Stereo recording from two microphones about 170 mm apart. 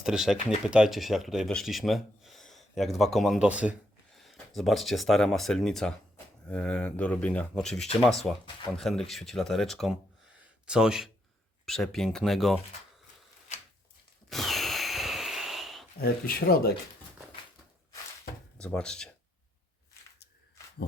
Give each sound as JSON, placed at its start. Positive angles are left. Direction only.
{"t": 0.0, "sound": "speech", "side_deg": 0}
{"t": 14.3, "sound": "a sound", "side_deg": 0}
{"t": 16.0, "sound": "speech", "side_deg": 65}
{"t": 18.5, "sound": "speech", "side_deg": 5}